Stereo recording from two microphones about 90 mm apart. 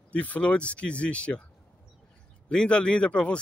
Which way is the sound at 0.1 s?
15° left (ahead or behind).